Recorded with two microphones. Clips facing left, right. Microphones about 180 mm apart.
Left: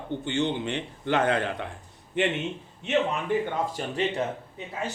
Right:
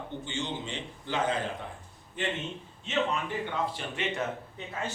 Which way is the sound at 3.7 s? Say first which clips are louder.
Left 6 dB; 35° left (ahead or behind).